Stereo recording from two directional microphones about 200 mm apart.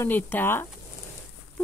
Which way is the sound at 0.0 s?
10° left (ahead or behind).